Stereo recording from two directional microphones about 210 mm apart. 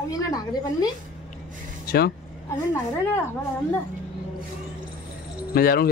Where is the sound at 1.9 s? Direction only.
50° left (ahead or behind).